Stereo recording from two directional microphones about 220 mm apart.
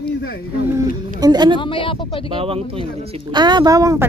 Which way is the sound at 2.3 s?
25° right (ahead or behind).